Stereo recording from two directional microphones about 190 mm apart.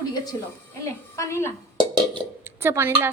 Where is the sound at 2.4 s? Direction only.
10° right (ahead or behind).